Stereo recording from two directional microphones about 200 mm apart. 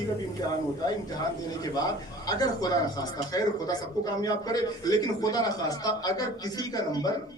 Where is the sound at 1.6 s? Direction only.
20° left (ahead or behind).